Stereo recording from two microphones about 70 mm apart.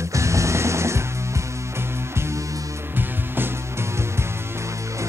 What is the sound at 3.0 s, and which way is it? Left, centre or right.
Music, right.